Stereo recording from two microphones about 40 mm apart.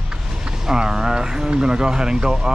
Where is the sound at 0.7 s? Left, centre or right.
Centre.